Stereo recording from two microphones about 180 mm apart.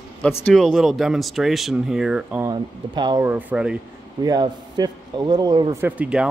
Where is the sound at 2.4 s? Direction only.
25° right (ahead or behind).